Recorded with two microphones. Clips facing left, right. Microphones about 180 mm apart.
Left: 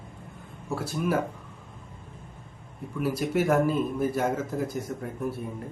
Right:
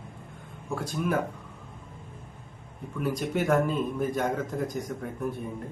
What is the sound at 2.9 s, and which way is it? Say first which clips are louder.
A man's voice: left 2 dB; 5° left (ahead or behind).